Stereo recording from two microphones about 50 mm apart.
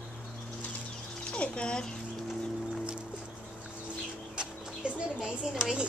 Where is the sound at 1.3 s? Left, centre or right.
Centre.